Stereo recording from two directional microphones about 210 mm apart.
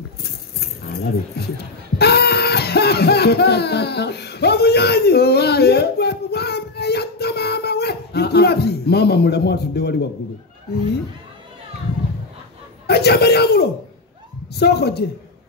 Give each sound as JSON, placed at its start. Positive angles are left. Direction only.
{"t": 0.2, "sound": "music", "side_deg": 50}
{"t": 1.4, "sound": "a woman's voice", "side_deg": 50}
{"t": 2.0, "sound": "a sound", "side_deg": 50}
{"t": 12.8, "sound": "a man's voice", "side_deg": 50}